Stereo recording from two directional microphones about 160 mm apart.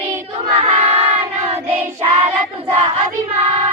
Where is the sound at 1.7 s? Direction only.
35° right (ahead or behind).